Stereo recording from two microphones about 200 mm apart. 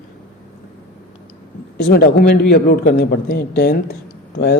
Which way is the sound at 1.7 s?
55° left (ahead or behind).